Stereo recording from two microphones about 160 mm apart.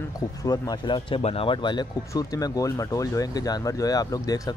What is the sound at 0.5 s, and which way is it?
Speech, 25° left (ahead or behind).